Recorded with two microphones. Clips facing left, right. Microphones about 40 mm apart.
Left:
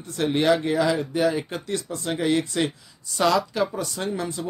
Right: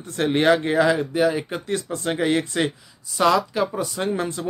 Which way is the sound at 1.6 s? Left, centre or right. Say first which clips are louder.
Right 3 dB; right.